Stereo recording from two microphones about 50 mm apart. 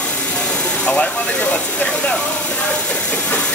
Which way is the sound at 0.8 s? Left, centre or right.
Left.